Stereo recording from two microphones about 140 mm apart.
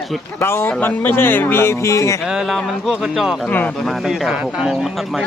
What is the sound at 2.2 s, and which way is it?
Speech, centre (ahead or behind).